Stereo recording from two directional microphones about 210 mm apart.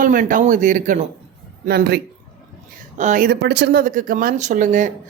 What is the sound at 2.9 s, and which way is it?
Speech, 35° right (ahead or behind).